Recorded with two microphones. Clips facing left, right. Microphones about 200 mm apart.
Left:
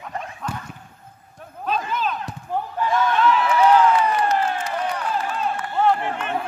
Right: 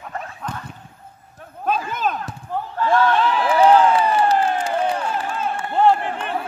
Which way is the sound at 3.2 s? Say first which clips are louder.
Right 1 dB; 30° right (ahead or behind).